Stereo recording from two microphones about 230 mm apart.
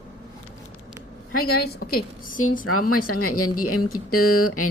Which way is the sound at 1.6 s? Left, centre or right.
Left.